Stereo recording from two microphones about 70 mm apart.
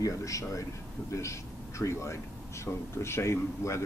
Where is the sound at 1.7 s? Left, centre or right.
Left.